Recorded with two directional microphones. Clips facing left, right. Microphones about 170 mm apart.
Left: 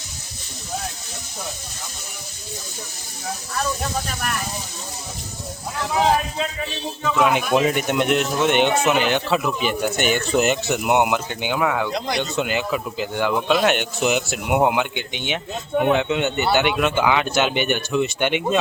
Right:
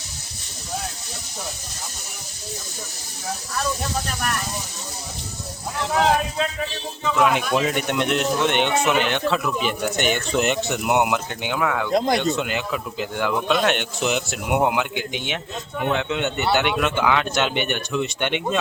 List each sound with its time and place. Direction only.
7.1 s speech: centre (ahead or behind)
11.9 s speech: 50° right (ahead or behind)
12.4 s speech: centre (ahead or behind)